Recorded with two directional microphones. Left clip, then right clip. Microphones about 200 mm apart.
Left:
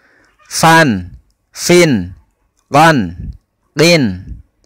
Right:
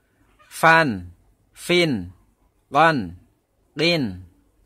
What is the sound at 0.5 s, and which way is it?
A man's voice, 35° left (ahead or behind).